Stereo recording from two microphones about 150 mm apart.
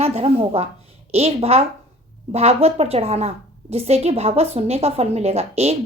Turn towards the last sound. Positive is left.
turn(degrees=-45)  # may be behind; listen again after turning